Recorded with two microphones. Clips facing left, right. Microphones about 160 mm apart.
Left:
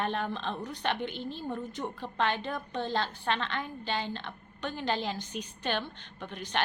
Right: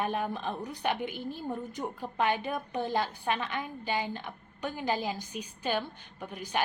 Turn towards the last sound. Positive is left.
turn(degrees=-10)  # may be behind; listen again after turning